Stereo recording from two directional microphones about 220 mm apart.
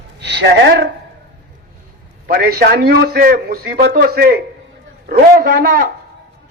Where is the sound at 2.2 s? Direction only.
45° right (ahead or behind).